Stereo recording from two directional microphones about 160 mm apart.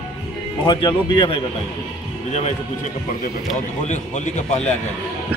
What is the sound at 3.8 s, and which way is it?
Speech, 45° left (ahead or behind).